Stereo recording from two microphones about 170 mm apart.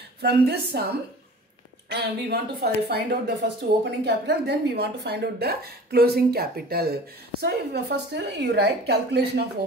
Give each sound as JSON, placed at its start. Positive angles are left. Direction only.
{"t": 0.2, "sound": "a woman's voice", "side_deg": -75}
{"t": 1.9, "sound": "a woman's voice", "side_deg": -80}